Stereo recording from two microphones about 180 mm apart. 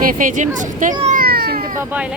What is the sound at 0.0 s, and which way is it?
Speech, 50° right (ahead or behind).